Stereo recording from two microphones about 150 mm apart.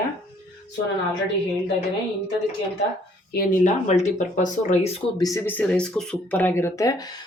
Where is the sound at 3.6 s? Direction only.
50° left (ahead or behind).